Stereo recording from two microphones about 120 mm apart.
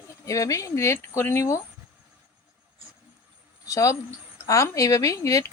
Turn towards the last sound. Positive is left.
turn(degrees=25)  # may be behind; listen again after turning